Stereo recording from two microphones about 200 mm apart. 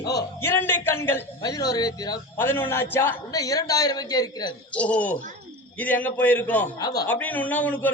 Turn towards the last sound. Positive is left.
turn(degrees=10)  # may be behind; listen again after turning